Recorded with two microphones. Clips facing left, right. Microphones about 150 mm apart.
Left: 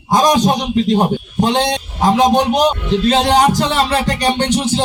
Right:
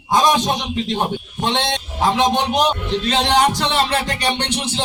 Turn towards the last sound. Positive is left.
turn(degrees=40)  # may be behind; listen again after turning